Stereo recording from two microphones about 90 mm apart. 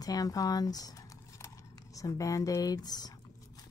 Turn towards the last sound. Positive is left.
turn(degrees=50)  # may be behind; listen again after turning